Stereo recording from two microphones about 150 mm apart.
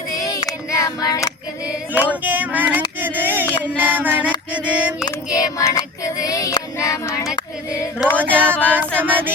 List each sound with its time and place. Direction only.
0.1 s child singing: 25° left (ahead or behind)
1.6 s female singing: 10° right (ahead or behind)
2.2 s a sound: 10° right (ahead or behind)
3.6 s music: 10° right (ahead or behind)
4.5 s female singing: 10° right (ahead or behind)
5.0 s child singing: 25° left (ahead or behind)
8.2 s female singing: 10° right (ahead or behind)